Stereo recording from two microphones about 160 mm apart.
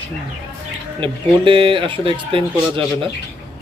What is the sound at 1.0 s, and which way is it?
Speech, 35° right (ahead or behind).